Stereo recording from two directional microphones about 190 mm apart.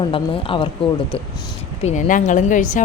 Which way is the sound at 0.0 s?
30° left (ahead or behind).